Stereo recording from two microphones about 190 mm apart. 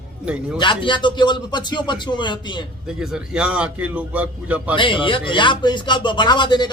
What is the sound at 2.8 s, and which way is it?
A man's voice, 5° right (ahead or behind).